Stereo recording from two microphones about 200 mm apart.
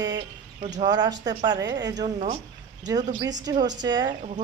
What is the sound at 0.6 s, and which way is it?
Speech, 35° right (ahead or behind).